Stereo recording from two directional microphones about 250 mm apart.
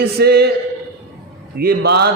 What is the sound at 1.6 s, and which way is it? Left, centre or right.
Speech, right.